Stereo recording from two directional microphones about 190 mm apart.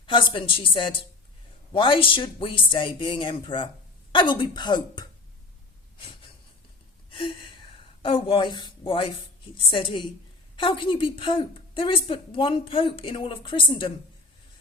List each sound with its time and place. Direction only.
0.0 s a woman's voice: 25° left (ahead or behind)
6.0 s a sound: 25° left (ahead or behind)
9.6 s a woman's voice: 25° left (ahead or behind)